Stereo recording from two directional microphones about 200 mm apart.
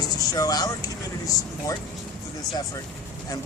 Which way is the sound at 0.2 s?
20° left (ahead or behind).